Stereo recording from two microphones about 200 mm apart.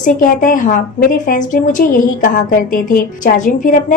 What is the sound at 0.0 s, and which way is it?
A woman's voice, 45° left (ahead or behind).